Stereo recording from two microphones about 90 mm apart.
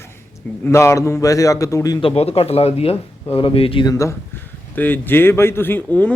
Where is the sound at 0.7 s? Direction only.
35° left (ahead or behind).